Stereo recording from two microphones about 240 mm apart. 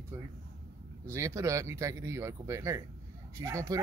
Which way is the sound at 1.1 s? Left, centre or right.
Centre.